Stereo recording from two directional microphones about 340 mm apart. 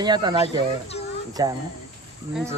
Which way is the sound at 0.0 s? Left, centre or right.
Centre.